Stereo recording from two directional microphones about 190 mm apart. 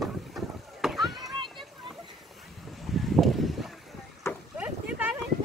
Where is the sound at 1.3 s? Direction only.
25° right (ahead or behind).